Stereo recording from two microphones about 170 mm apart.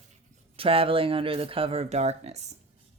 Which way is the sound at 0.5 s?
35° right (ahead or behind).